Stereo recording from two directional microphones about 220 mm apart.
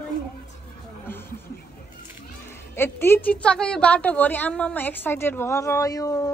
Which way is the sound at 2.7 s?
10° left (ahead or behind).